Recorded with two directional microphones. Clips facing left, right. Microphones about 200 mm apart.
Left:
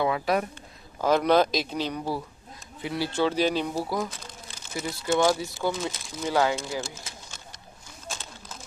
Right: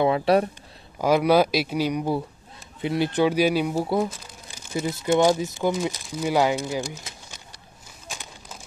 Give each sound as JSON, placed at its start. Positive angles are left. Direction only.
{"t": 0.0, "sound": "speech", "side_deg": -30}
{"t": 0.9, "sound": "speech", "side_deg": -10}
{"t": 4.7, "sound": "speech", "side_deg": -20}
{"t": 8.1, "sound": "pigeon", "side_deg": -15}